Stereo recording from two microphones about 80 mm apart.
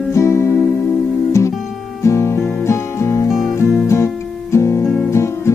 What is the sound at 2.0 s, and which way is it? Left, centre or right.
Music, left.